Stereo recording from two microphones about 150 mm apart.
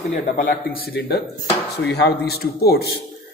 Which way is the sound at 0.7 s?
90° left.